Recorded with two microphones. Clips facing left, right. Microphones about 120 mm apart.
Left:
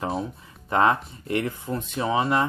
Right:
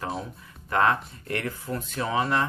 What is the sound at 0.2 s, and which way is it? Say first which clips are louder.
Speech: left 6 dB; 25° left (ahead or behind).